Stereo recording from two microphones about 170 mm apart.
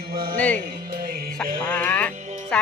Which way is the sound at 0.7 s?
60° right (ahead or behind).